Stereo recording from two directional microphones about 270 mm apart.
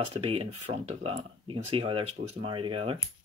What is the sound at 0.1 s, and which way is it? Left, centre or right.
Speech, right.